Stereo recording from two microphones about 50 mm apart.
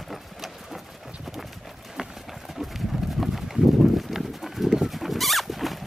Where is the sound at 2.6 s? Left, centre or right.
Centre.